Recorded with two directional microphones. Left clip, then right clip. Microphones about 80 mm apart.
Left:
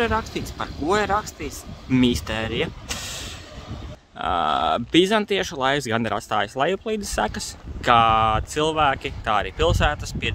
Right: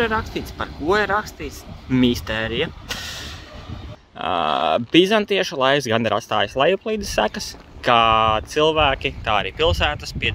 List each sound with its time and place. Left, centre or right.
0.0 s speech: centre
4.2 s speech: centre